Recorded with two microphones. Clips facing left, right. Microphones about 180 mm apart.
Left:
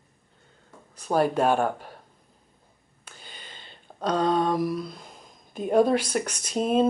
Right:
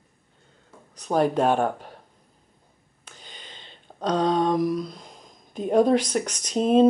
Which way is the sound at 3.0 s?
5° left (ahead or behind).